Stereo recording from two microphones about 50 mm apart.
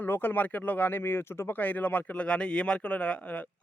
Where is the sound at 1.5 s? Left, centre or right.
Left.